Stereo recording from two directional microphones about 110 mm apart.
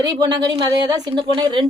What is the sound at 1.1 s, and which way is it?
Speech, 50° right (ahead or behind).